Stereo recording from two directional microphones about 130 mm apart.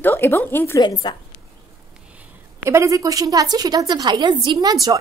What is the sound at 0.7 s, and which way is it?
Speech, 30° left (ahead or behind).